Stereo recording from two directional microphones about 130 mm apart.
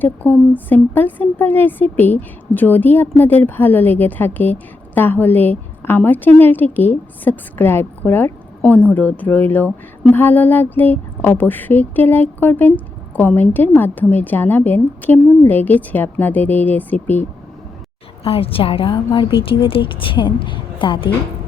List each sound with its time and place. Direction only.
0.0 s speech: 15° left (ahead or behind)
18.2 s a woman's voice: 50° left (ahead or behind)